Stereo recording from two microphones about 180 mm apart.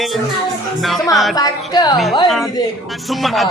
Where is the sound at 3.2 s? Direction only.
Centre (ahead or behind).